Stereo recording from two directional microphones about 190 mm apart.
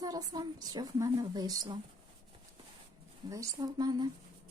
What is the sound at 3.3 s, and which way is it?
Speech, 20° right (ahead or behind).